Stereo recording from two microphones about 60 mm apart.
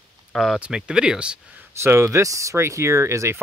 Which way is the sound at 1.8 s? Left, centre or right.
Right.